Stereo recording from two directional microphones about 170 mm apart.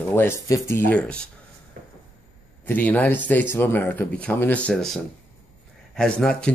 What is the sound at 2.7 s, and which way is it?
Speech, 10° left (ahead or behind).